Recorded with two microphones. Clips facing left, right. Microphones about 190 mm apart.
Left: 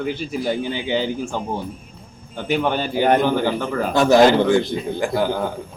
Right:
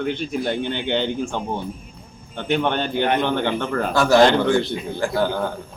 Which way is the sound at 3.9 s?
20° left (ahead or behind).